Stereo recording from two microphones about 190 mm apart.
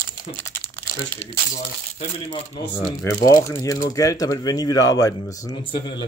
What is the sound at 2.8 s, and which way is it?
Speech, 15° left (ahead or behind).